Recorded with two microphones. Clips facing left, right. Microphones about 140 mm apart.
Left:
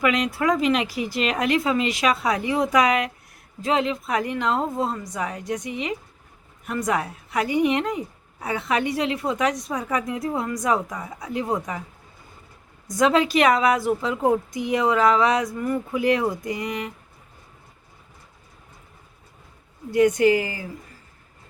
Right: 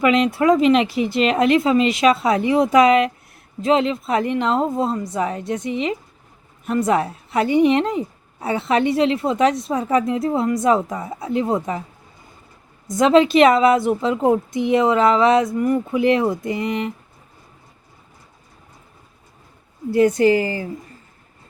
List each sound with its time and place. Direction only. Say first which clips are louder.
0.0 s a woman's voice: right 6 dB; 25° right (ahead or behind)
12.9 s a woman's voice: right 5 dB; 25° right (ahead or behind)
19.9 s speech: right 3 dB; 30° right (ahead or behind)